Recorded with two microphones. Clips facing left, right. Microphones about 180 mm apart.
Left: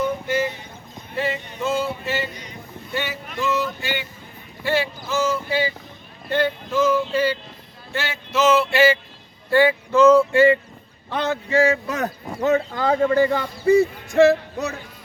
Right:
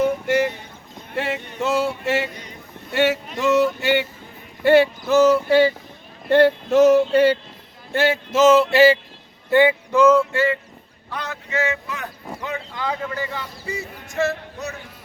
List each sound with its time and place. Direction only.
0.0 s a sound: 75° right (ahead or behind)
1.6 s speech: 75° right (ahead or behind)
4.6 s a sound: 60° right (ahead or behind)
6.2 s speech: 65° right (ahead or behind)
7.9 s male singing: 55° right (ahead or behind); by 9.0 s 35° right (ahead or behind)
9.5 s speech: 20° right (ahead or behind)
10.2 s speech: 15° left (ahead or behind)
11.1 s speech: 25° left (ahead or behind); by 13.1 s 45° left (ahead or behind)